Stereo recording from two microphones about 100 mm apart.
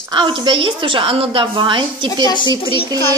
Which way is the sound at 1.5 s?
50° right (ahead or behind).